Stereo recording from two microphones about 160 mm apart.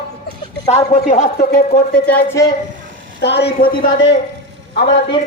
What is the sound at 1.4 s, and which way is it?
Speech, 65° left (ahead or behind).